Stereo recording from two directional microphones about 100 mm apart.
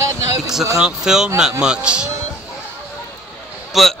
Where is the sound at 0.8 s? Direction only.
5° right (ahead or behind).